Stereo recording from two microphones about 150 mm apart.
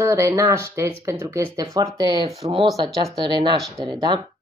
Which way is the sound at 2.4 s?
35° right (ahead or behind).